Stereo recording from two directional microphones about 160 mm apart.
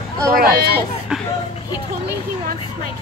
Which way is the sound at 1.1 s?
5° right (ahead or behind).